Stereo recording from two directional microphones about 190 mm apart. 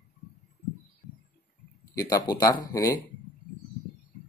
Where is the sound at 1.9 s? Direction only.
20° left (ahead or behind).